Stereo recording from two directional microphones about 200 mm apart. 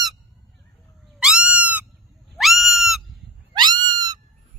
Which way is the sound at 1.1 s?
5° right (ahead or behind).